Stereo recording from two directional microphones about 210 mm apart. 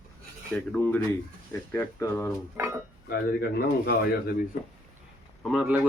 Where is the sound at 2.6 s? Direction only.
15° right (ahead or behind).